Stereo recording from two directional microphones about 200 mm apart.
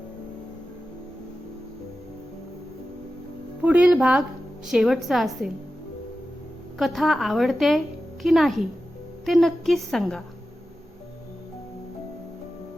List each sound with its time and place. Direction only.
3.6 s a woman's voice: 5° right (ahead or behind)
6.7 s a woman's voice: centre (ahead or behind)